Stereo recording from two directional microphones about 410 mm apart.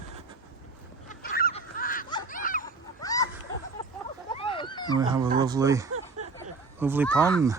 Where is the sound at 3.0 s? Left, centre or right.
Centre.